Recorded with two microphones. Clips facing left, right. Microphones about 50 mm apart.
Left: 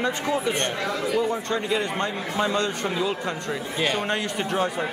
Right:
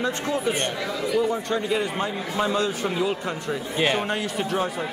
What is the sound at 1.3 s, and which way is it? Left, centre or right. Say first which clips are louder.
A man's voice: right 1 dB; centre.